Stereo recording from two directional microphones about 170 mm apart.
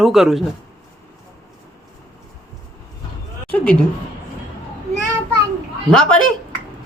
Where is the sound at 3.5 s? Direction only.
10° left (ahead or behind).